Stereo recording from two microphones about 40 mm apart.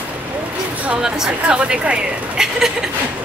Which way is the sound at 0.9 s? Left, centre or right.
Centre.